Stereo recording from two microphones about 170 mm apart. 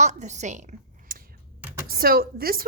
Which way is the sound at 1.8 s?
60° right (ahead or behind).